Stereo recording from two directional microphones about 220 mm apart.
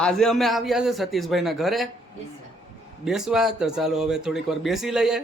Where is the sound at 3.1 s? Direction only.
Centre (ahead or behind).